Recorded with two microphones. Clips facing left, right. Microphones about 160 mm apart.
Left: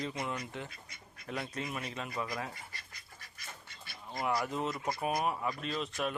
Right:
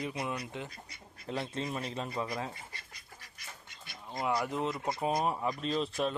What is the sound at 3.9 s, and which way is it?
Speech, 20° right (ahead or behind).